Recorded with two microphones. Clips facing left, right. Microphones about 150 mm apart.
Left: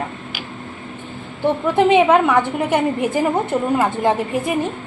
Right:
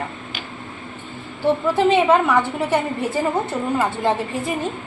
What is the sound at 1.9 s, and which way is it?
A woman's voice, 15° left (ahead or behind).